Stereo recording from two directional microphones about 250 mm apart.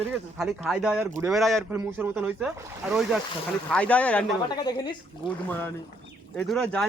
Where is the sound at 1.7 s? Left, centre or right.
Centre.